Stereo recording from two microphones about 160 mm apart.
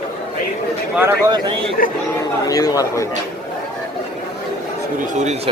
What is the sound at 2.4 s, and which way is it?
Speech, 20° left (ahead or behind).